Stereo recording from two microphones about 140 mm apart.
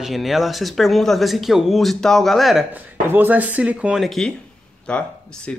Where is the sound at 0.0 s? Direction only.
Centre (ahead or behind).